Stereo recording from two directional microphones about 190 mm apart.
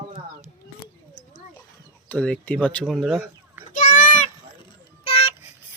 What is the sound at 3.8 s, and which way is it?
Children playing, 45° left (ahead or behind).